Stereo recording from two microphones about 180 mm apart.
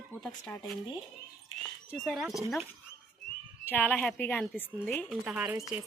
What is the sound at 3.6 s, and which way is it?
Speech, 10° left (ahead or behind).